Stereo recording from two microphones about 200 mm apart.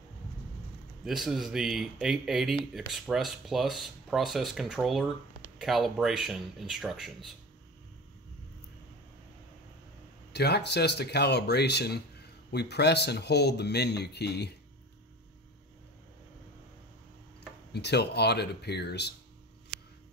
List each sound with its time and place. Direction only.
1.0 s speech: centre (ahead or behind)
10.3 s speech: 55° left (ahead or behind)
17.7 s speech: 55° left (ahead or behind)